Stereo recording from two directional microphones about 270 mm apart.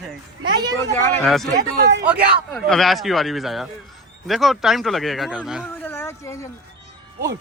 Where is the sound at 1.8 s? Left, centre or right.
Right.